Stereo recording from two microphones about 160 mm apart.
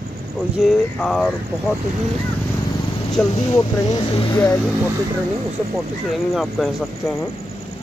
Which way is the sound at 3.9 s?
20° left (ahead or behind).